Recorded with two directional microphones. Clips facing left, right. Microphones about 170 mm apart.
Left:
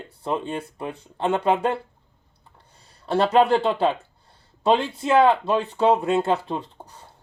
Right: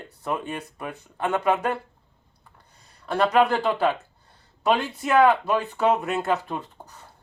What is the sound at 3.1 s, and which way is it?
Speech, 30° left (ahead or behind).